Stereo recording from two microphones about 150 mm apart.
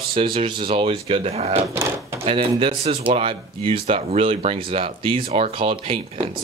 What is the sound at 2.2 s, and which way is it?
Speech, 40° right (ahead or behind).